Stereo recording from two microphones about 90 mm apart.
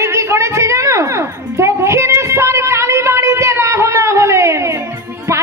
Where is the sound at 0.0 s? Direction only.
30° right (ahead or behind).